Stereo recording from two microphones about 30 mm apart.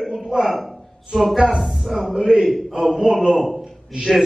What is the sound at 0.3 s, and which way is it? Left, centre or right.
Speech, right.